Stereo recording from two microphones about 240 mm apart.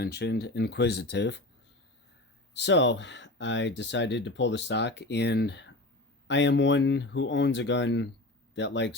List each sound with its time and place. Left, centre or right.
0.0 s speech: left
2.5 s speech: left